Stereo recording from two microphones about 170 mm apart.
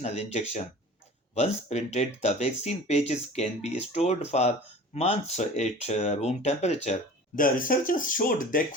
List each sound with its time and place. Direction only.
0.0 s speech: 40° left (ahead or behind)
7.3 s speech: 55° left (ahead or behind)